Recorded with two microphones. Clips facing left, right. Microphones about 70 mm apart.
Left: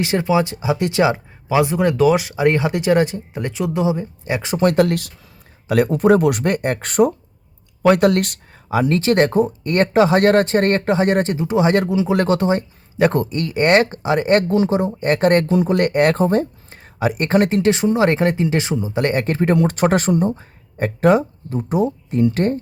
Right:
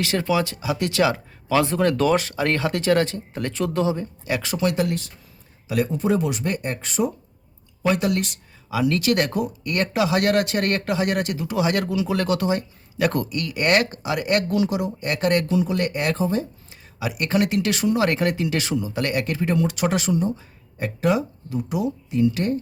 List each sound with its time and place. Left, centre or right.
0.0 s speech: left
4.5 s speech: left
4.9 s speech: left
5.6 s speech: left
8.7 s speech: left